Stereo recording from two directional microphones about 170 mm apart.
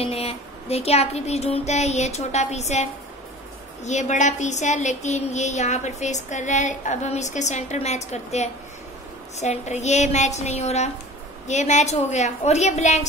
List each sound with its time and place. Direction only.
0.0 s a woman's voice: 35° left (ahead or behind)